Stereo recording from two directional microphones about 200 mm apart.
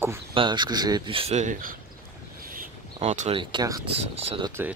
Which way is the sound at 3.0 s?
35° right (ahead or behind).